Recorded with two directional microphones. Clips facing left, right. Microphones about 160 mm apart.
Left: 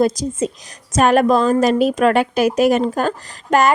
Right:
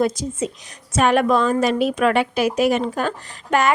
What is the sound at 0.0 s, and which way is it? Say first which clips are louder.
A woman's voice: left 4 dB; 40° left (ahead or behind).